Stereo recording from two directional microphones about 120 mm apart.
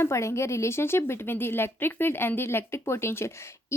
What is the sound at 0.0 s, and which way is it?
A woman's voice, 25° left (ahead or behind).